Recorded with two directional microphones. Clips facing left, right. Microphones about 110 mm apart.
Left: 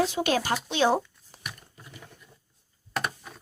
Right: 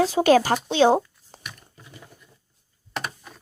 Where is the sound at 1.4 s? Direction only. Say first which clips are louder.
Left 1 dB; centre (ahead or behind).